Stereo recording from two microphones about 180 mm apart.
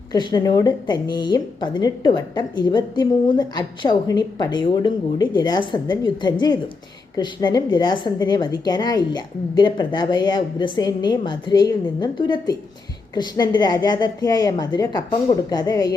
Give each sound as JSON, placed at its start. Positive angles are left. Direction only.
{"t": 0.1, "sound": "a woman's voice", "side_deg": 25}